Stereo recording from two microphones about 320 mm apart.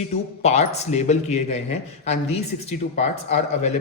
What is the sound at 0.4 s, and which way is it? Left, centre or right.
Speech, centre.